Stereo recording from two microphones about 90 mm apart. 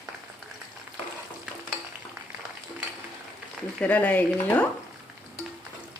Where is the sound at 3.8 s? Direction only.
15° left (ahead or behind).